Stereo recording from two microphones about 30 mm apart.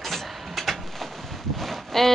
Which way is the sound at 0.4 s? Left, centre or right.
Centre.